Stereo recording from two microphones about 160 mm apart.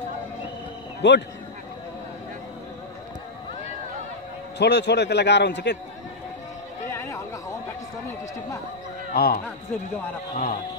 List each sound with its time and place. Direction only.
1.0 s a man's voice: 90° left
4.6 s a man's voice: 90° left
6.9 s chatter: 15° left (ahead or behind)
9.1 s speech: 70° left (ahead or behind)
10.3 s a man's voice: 50° left (ahead or behind)